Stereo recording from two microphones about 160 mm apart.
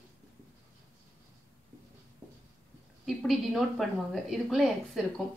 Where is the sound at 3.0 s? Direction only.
Centre (ahead or behind).